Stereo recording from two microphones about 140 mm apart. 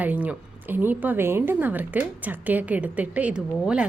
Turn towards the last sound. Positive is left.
turn(degrees=-5)  # may be behind; listen again after turning